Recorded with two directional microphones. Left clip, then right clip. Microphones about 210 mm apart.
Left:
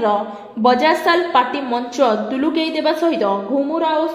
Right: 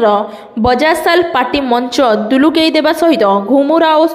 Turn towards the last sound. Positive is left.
turn(degrees=-35)  # may be behind; listen again after turning